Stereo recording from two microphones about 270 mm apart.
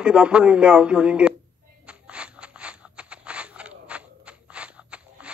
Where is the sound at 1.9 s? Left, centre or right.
Centre.